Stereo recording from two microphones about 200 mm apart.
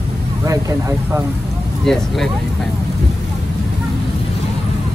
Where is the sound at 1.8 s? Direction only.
Centre (ahead or behind).